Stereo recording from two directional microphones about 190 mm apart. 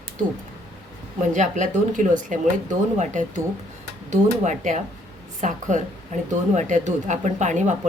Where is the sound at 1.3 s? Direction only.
40° right (ahead or behind).